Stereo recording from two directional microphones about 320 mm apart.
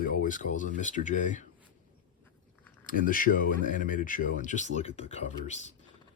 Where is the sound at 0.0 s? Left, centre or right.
Left.